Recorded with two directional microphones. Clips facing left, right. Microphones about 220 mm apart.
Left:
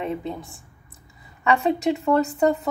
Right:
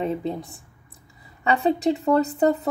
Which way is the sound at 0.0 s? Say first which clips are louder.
Right 2 dB; 35° right (ahead or behind).